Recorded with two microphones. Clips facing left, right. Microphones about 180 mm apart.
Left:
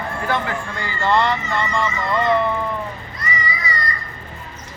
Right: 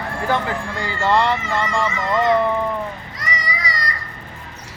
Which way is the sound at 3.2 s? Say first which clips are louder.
Left 1 dB; 90° right.